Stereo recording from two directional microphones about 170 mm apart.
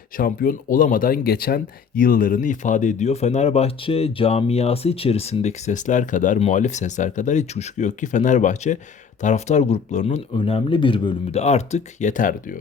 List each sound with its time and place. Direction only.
0.2 s speech: 55° left (ahead or behind)
10.3 s speech: 30° left (ahead or behind); by 12.5 s 50° left (ahead or behind)